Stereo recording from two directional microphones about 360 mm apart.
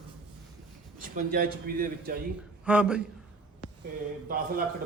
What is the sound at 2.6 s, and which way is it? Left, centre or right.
Speech, centre.